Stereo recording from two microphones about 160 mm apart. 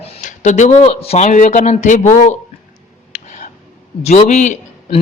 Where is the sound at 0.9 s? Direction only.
40° left (ahead or behind).